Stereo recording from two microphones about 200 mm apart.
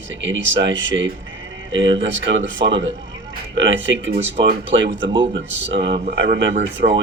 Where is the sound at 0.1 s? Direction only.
65° right (ahead or behind).